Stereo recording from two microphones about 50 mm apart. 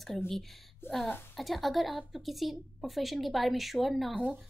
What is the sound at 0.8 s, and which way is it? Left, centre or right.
Speech, left.